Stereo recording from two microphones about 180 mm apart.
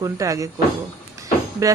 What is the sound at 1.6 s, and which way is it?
Speech, 15° right (ahead or behind).